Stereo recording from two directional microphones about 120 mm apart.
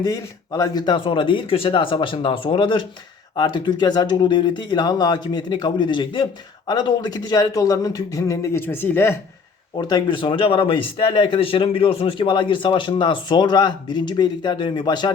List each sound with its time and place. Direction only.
0.0 s speech: 30° left (ahead or behind)
9.7 s speech: 40° left (ahead or behind)